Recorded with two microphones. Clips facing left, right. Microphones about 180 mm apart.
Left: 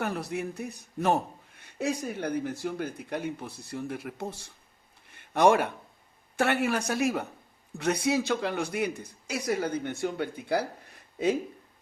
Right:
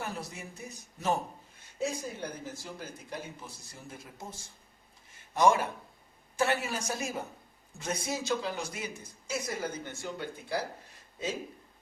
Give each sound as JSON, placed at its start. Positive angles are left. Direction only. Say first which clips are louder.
{"t": 0.0, "sound": "a man's voice", "louder": "left 8 dB", "side_deg": 60}